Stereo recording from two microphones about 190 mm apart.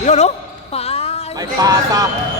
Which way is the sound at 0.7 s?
30° left (ahead or behind).